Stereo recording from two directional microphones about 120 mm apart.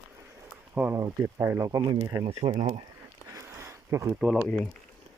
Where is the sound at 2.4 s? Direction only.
55° right (ahead or behind).